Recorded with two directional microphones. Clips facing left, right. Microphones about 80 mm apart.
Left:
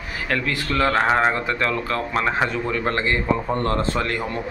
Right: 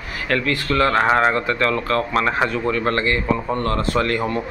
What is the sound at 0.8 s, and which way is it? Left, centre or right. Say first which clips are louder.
A man's voice: right 2 dB; centre.